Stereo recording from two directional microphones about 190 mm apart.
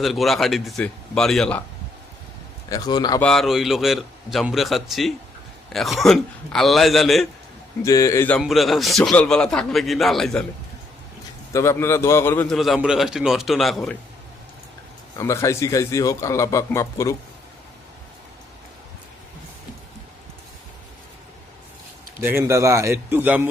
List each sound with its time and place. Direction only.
0.0 s speech: centre (ahead or behind)
2.6 s a man's voice: 20° left (ahead or behind)
3.2 s speech: 5° left (ahead or behind)
7.8 s a man's voice: 15° left (ahead or behind)
8.4 s speech: centre (ahead or behind)
11.5 s a man's voice: 15° left (ahead or behind)
12.5 s speech: centre (ahead or behind)
15.2 s a man's voice: 15° left (ahead or behind)
22.2 s a man's voice: 15° right (ahead or behind)